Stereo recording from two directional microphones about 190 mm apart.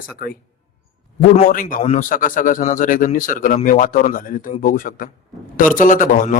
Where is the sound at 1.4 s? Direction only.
45° left (ahead or behind).